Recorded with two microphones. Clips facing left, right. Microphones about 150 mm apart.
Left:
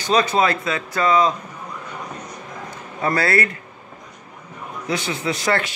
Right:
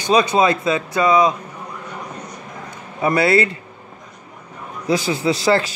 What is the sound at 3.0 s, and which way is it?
Speech, 20° right (ahead or behind).